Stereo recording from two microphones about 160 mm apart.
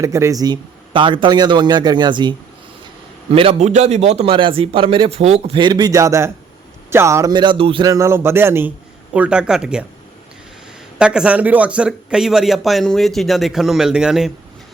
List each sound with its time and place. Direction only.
0.0 s a man's voice: 20° right (ahead or behind)
3.3 s a man's voice: 40° right (ahead or behind)
5.5 s a man's voice: 25° right (ahead or behind)
7.9 s a man's voice: 20° right (ahead or behind)
10.9 s a man's voice: 5° right (ahead or behind)